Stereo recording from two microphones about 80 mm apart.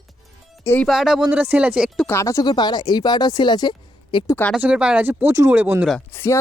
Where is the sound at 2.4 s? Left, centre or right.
Left.